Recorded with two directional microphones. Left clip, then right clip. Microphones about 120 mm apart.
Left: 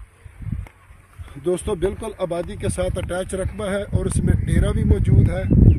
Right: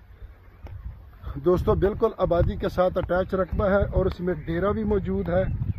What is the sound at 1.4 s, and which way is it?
Speech, 50° right (ahead or behind).